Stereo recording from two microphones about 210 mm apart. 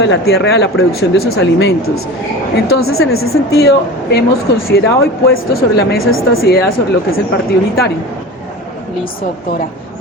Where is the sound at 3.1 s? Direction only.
80° left.